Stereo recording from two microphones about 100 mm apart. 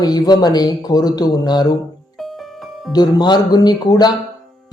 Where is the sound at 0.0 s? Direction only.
40° left (ahead or behind).